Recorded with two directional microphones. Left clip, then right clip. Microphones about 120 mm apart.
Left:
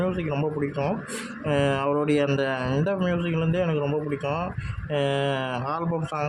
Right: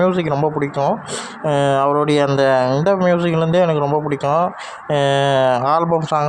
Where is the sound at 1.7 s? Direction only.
30° right (ahead or behind).